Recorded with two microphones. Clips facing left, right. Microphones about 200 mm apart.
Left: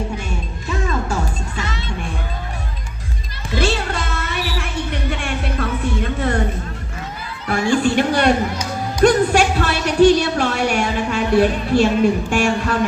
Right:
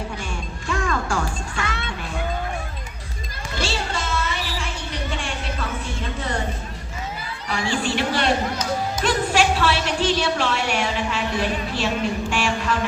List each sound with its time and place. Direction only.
0.7 s music: 20° left (ahead or behind)
1.6 s music: 55° right (ahead or behind)
3.6 s music: 60° left (ahead or behind)
7.4 s chatter: 50° left (ahead or behind)
9.0 s a sound: 45° left (ahead or behind)